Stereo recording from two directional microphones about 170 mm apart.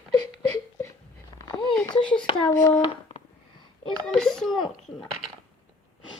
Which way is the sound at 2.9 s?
35° left (ahead or behind).